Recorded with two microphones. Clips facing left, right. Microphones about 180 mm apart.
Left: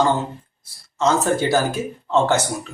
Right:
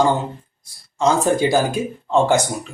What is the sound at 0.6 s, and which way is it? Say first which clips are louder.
Speech: right 1 dB; 15° right (ahead or behind).